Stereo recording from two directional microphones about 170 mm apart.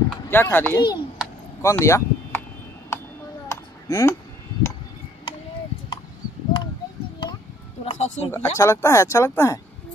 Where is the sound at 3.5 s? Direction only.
20° left (ahead or behind).